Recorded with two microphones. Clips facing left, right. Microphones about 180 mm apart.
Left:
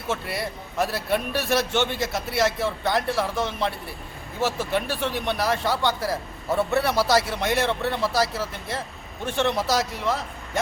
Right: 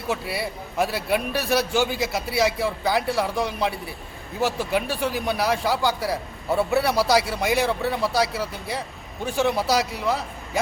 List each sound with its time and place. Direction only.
0.1 s a man's voice: centre (ahead or behind)